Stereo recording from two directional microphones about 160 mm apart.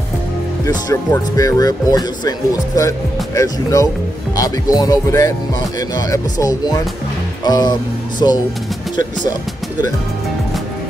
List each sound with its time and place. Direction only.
0.7 s speech: 25° left (ahead or behind)